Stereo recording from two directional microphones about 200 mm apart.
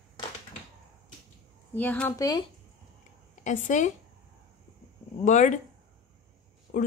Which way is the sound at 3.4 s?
40° left (ahead or behind).